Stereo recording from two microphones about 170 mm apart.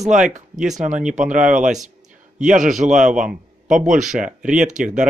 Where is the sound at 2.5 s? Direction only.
50° right (ahead or behind).